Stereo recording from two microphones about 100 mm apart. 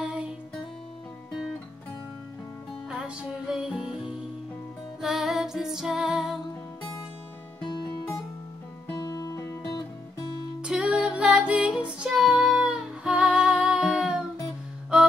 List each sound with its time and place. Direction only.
0.0 s music: 10° right (ahead or behind)
2.9 s music: 5° right (ahead or behind)
5.0 s music: 5° right (ahead or behind)
8.9 s music: 45° left (ahead or behind)
10.6 s music: 10° right (ahead or behind)